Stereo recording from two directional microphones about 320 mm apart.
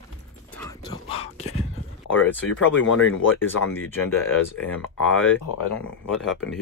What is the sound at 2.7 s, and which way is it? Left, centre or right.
Speech, left.